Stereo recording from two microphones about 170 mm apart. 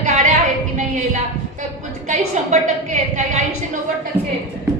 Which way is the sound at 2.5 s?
45° right (ahead or behind).